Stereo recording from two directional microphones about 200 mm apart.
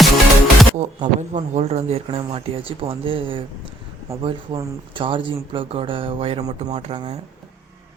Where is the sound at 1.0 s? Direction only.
35° right (ahead or behind).